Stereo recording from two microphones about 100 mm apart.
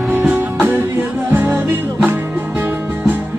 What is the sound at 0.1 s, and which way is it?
Music, 15° right (ahead or behind).